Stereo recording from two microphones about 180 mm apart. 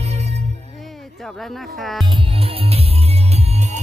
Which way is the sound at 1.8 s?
Centre (ahead or behind).